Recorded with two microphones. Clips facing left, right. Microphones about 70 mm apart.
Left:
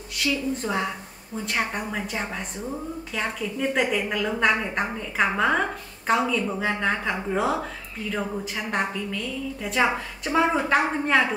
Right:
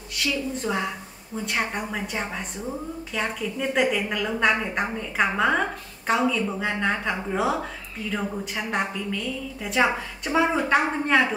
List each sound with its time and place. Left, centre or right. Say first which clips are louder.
0.2 s a woman's voice: left 1 dB; centre